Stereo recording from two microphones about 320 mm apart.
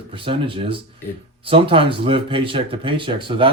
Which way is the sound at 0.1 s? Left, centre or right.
Centre.